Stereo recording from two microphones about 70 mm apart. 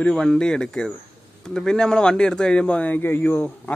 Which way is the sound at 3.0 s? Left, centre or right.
Left.